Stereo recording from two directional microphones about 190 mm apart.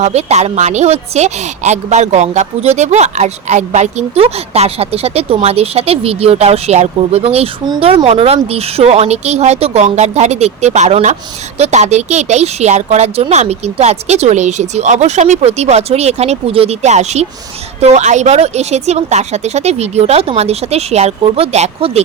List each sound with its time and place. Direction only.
0.0 s a woman's voice: 35° right (ahead or behind)